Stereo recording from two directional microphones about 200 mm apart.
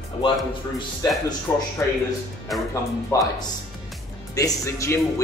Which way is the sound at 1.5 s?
10° left (ahead or behind).